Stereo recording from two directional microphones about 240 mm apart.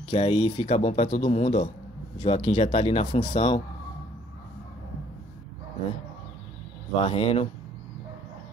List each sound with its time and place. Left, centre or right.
0.0 s speech: left
7.0 s speech: left